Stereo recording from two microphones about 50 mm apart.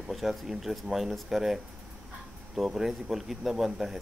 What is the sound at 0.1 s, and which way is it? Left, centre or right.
Speech, centre.